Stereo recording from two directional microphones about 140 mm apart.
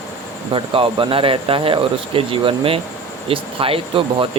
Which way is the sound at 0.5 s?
40° right (ahead or behind).